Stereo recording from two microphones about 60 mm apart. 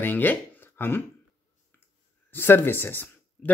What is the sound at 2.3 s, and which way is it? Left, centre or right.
Speech, left.